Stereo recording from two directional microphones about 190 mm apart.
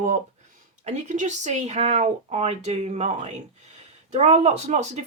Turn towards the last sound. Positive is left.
turn(degrees=-35)  # may be behind; listen again after turning